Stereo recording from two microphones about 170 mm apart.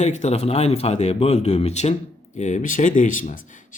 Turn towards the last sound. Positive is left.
turn(degrees=50)  # may be behind; listen again after turning